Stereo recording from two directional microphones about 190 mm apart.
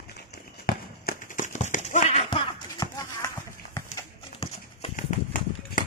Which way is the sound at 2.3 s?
20° left (ahead or behind).